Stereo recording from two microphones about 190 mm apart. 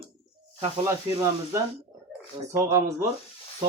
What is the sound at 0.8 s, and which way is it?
Speech, 15° right (ahead or behind).